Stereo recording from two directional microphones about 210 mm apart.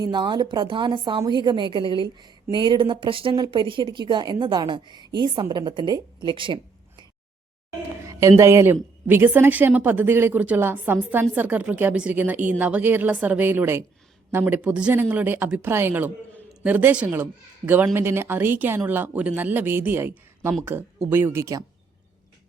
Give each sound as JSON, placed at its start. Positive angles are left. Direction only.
{"t": 0.0, "sound": "a woman's voice", "side_deg": -20}
{"t": 8.0, "sound": "a sound", "side_deg": -15}
{"t": 8.4, "sound": "a woman's voice", "side_deg": -15}